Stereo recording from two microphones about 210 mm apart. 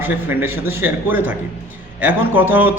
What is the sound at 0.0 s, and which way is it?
A man's voice, 10° right (ahead or behind).